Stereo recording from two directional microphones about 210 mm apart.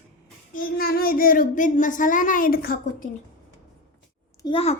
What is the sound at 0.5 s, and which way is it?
Speech, 45° left (ahead or behind).